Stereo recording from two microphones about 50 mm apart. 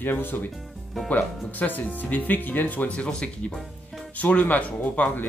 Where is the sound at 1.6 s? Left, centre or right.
Left; by 3.5 s centre.